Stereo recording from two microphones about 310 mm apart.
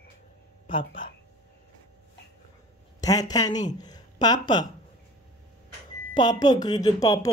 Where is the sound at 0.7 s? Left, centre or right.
Centre.